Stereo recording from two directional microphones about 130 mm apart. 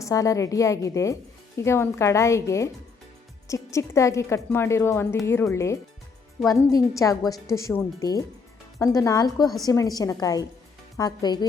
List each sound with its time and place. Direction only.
0.0 s speech: 25° left (ahead or behind)